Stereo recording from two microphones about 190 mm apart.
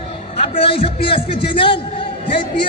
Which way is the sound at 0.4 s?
30° left (ahead or behind).